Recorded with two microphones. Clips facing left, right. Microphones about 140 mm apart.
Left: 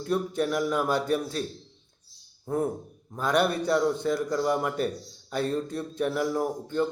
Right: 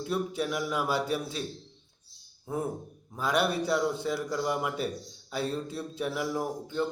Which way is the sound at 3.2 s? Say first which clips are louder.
Left 3 dB; 5° right (ahead or behind).